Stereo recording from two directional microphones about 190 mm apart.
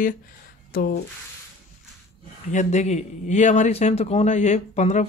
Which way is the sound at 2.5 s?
40° left (ahead or behind).